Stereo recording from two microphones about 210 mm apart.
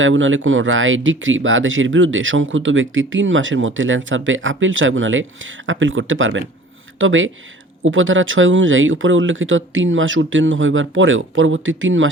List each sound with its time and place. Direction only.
0.0 s speech: 70° right (ahead or behind)